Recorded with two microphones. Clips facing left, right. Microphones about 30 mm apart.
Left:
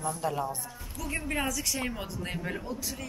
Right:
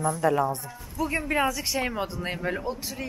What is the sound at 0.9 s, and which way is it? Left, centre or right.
Speech, right.